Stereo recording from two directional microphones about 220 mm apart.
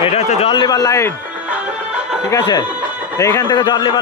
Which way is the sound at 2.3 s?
15° left (ahead or behind).